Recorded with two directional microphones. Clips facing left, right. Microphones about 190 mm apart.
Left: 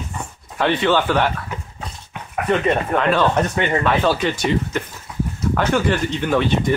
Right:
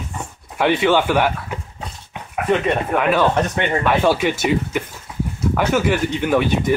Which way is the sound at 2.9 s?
10° right (ahead or behind).